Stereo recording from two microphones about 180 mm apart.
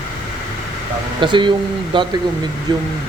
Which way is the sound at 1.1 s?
25° right (ahead or behind).